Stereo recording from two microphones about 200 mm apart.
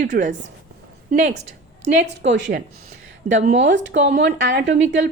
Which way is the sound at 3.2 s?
35° right (ahead or behind).